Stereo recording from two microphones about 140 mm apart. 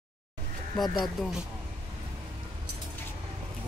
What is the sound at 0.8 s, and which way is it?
Speech, 30° left (ahead or behind).